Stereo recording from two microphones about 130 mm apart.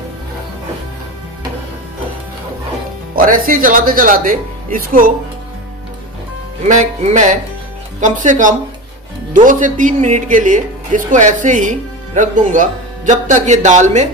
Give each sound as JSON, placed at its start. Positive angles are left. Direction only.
{"t": 3.2, "sound": "speech", "side_deg": -90}
{"t": 6.7, "sound": "speech", "side_deg": -70}
{"t": 9.3, "sound": "speech", "side_deg": -90}